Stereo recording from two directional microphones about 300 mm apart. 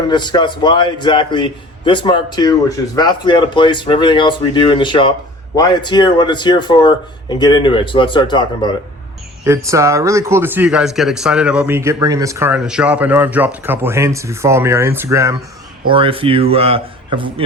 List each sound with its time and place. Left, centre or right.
0.1 s a man's voice: centre
9.4 s speech: centre